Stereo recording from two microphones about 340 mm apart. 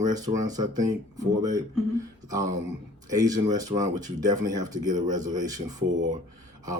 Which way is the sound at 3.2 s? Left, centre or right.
Centre.